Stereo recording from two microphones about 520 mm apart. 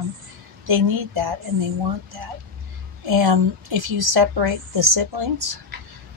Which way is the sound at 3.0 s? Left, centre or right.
Right.